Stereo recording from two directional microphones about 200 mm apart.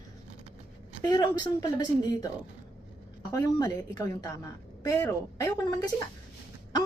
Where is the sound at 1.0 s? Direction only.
20° left (ahead or behind).